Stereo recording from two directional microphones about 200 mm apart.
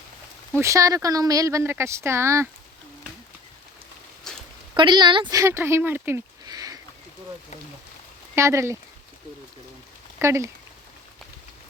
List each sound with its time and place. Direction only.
0.6 s speech: 15° right (ahead or behind)
4.3 s a sound: 5° left (ahead or behind)
4.7 s speech: 20° right (ahead or behind)
8.4 s speech: 15° right (ahead or behind)
10.2 s speech: 15° right (ahead or behind)